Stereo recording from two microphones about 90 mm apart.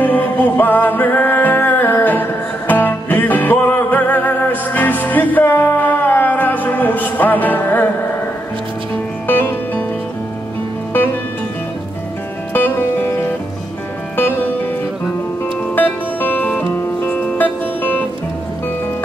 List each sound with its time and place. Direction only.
0.0 s music: 20° left (ahead or behind)
9.3 s music: 20° left (ahead or behind)
12.5 s music: 20° left (ahead or behind)
15.7 s music: 20° left (ahead or behind)